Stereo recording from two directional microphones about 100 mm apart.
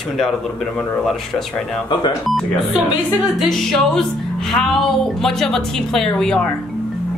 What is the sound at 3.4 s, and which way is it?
A woman's voice, 5° left (ahead or behind).